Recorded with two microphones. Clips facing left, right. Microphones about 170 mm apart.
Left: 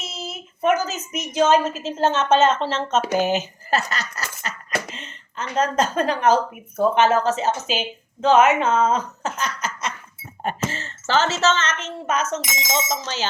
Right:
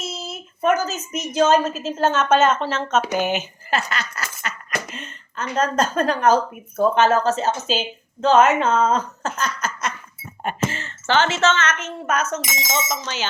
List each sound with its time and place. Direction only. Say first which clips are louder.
0.0 s a sound: right 2 dB; 20° left (ahead or behind)
1.6 s a woman's voice: even; 20° left (ahead or behind)
6.2 s speech: right 1 dB; 40° right (ahead or behind)
6.7 s a woman's voice: right 1 dB; 20° left (ahead or behind)
8.6 s speech: even; centre (ahead or behind)
8.9 s speech: right 1 dB; 15° left (ahead or behind)
10.4 s a woman's voice: right 1 dB; 35° left (ahead or behind)